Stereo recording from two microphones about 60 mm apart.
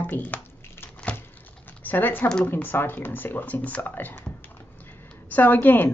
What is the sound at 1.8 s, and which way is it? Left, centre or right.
Speech, left.